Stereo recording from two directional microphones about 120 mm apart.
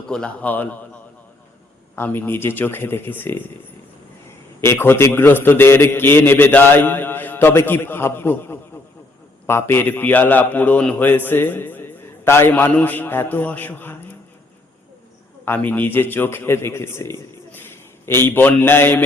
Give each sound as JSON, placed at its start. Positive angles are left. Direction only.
{"t": 0.1, "sound": "a man's voice", "side_deg": 10}
{"t": 2.0, "sound": "a man's voice", "side_deg": 15}
{"t": 4.6, "sound": "a man's voice", "side_deg": 20}
{"t": 15.4, "sound": "a man's voice", "side_deg": 15}